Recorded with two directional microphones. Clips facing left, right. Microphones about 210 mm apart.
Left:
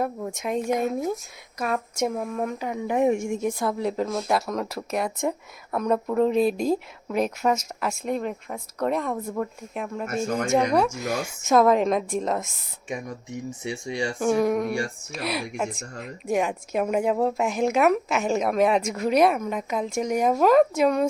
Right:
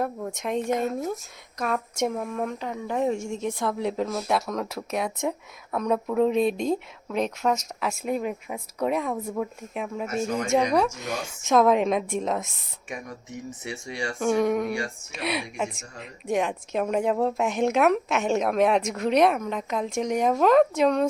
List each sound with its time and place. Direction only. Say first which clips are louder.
0.0 s a woman's voice: left 1 dB; 5° left (ahead or behind)
3.4 s a woman's voice: left 2 dB; 5° left (ahead or behind)
10.2 s a woman's voice: left 2 dB; 50° left (ahead or behind)
10.5 s a woman's voice: left 1 dB; 5° left (ahead or behind)
12.9 s speech: left 4 dB; 15° left (ahead or behind)
14.2 s a woman's voice: even; centre (ahead or behind)
15.8 s a woman's voice: left 5 dB; 50° left (ahead or behind)
16.2 s a woman's voice: left 1 dB; 5° left (ahead or behind)